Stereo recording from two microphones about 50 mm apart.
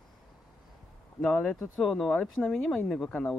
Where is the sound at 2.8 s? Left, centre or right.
Centre.